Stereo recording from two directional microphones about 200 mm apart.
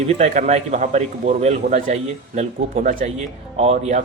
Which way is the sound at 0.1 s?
35° right (ahead or behind).